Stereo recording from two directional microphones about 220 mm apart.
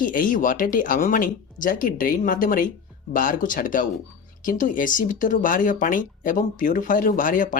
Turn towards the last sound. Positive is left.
turn(degrees=35)  # may be behind; listen again after turning